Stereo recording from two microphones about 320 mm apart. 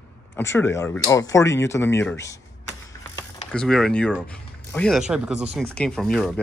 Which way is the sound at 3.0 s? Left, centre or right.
Centre.